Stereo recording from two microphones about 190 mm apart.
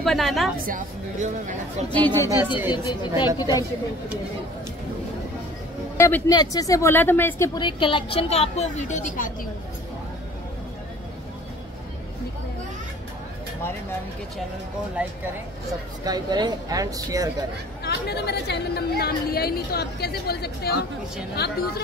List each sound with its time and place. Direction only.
0.0 s a woman's voice: centre (ahead or behind)
0.6 s a woman's voice: 45° right (ahead or behind)
2.0 s speech: 10° left (ahead or behind)
2.2 s speech: 10° right (ahead or behind)
2.7 s a woman's voice: 25° left (ahead or behind)
5.9 s a woman's voice: 15° left (ahead or behind); by 9.5 s 45° left (ahead or behind)
16.0 s speech: 20° right (ahead or behind)
17.8 s a woman's voice: 60° left (ahead or behind)